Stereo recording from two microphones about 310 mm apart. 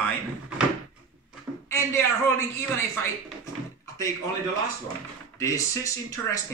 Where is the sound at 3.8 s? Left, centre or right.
Centre.